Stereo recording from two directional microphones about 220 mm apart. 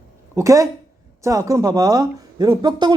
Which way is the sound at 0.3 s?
15° right (ahead or behind).